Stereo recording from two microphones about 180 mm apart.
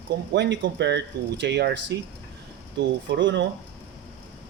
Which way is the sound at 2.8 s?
90° right.